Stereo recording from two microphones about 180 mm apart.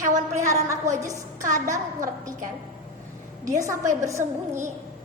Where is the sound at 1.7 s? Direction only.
20° right (ahead or behind).